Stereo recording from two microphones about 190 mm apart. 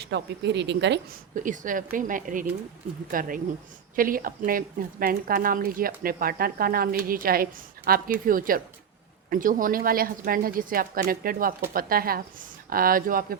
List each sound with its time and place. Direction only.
0.0 s speech: 65° right (ahead or behind)
1.4 s a woman's voice: 45° right (ahead or behind)